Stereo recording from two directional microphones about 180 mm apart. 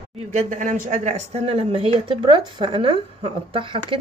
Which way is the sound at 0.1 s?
35° right (ahead or behind).